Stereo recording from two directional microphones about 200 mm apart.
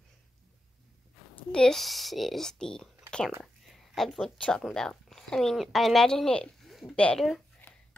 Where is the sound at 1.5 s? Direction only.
5° left (ahead or behind).